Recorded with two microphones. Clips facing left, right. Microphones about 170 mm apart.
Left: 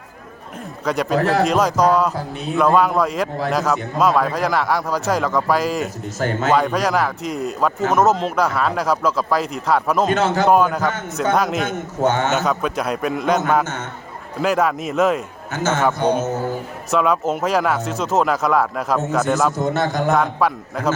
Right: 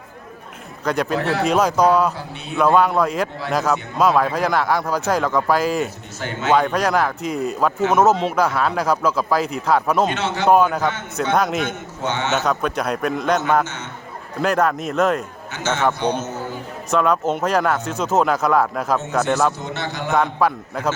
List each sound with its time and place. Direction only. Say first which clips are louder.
1.1 s a man's voice: left 8 dB; 40° left (ahead or behind)
1.5 s a man's voice: even; centre (ahead or behind)
6.1 s a man's voice: left 5 dB; 45° left (ahead or behind)
6.5 s a man's voice: right 2 dB; centre (ahead or behind)
10.1 s a man's voice: left 4 dB; 45° left (ahead or behind)
10.5 s a man's voice: even; centre (ahead or behind)
11.9 s a man's voice: left 4 dB; 45° left (ahead or behind)
12.5 s a man's voice: even; centre (ahead or behind)
14.4 s a man's voice: even; centre (ahead or behind)
15.5 s a man's voice: left 2 dB; 50° left (ahead or behind)
16.9 s a man's voice: even; centre (ahead or behind)
19.5 s a man's voice: left 8 dB; 50° left (ahead or behind)
20.1 s a man's voice: even; centre (ahead or behind)